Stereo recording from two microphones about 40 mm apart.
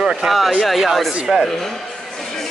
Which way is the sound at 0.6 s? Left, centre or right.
Centre.